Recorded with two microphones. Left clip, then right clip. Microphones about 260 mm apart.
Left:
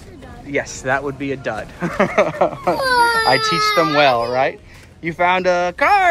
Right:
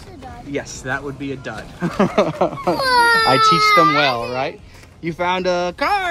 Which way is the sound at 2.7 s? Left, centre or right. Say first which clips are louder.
Right 3 dB; centre.